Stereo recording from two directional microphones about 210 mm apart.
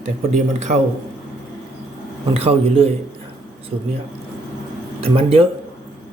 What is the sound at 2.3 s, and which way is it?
Speech, 30° right (ahead or behind).